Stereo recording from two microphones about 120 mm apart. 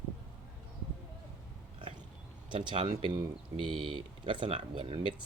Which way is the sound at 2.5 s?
40° right (ahead or behind).